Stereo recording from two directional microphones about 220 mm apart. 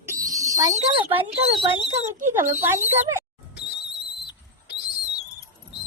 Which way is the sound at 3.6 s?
50° left (ahead or behind).